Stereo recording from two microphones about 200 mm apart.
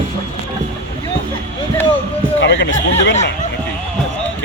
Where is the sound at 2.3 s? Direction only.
65° left (ahead or behind).